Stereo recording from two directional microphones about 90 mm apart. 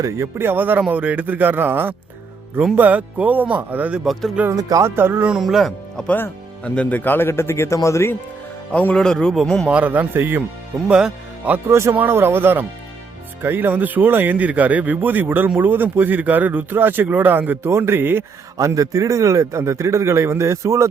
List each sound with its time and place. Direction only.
0.0 s a man's voice: 30° right (ahead or behind)
4.0 s a man's voice: centre (ahead or behind)
4.5 s a man's voice: 40° right (ahead or behind)
4.9 s a man's voice: 25° right (ahead or behind)
5.3 s speech: 5° right (ahead or behind)
6.1 s a man's voice: 25° left (ahead or behind)
8.7 s a man's voice: 15° left (ahead or behind)
9.6 s speech: 15° right (ahead or behind)
10.8 s speech: 10° right (ahead or behind)
11.7 s a man's voice: 30° right (ahead or behind)
18.5 s a man's voice: 35° right (ahead or behind)